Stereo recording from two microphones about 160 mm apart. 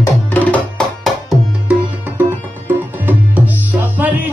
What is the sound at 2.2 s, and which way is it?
Tabla, 10° right (ahead or behind).